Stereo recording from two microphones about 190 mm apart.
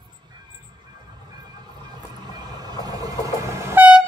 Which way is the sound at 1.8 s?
20° right (ahead or behind).